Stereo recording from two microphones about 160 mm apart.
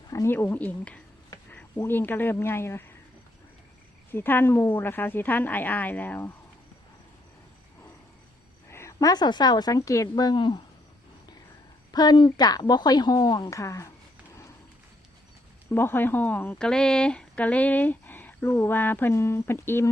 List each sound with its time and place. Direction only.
0.1 s speech: 15° left (ahead or behind)
1.5 s cricket: 10° left (ahead or behind)
1.8 s speech: 15° left (ahead or behind)
4.1 s speech: 15° left (ahead or behind)
8.7 s a woman's voice: 20° left (ahead or behind)
11.9 s a woman's voice: 25° left (ahead or behind)
15.7 s speech: 15° left (ahead or behind)